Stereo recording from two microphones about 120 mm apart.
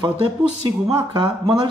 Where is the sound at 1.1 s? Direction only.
40° right (ahead or behind).